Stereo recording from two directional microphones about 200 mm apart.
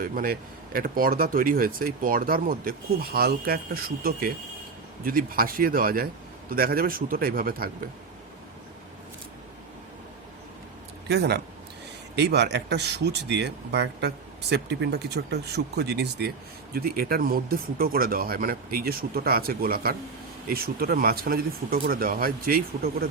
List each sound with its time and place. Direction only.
0.0 s speech: 45° right (ahead or behind)
11.1 s speech: 55° right (ahead or behind)